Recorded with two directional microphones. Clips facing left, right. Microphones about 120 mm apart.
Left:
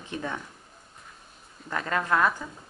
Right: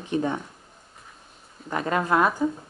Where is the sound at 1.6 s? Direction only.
20° right (ahead or behind).